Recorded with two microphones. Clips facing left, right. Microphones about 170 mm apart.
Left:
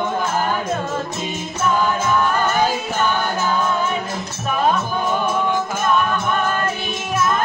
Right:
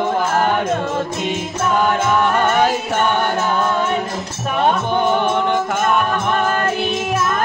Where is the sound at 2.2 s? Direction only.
70° right (ahead or behind).